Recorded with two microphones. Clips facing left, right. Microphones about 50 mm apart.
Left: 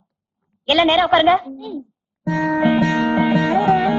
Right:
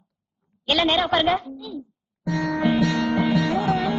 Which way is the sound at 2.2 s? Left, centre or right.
Left.